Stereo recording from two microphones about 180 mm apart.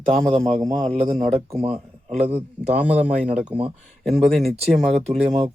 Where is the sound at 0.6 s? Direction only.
20° right (ahead or behind).